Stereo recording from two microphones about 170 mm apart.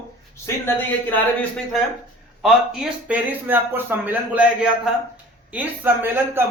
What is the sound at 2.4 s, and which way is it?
Speech, 5° right (ahead or behind).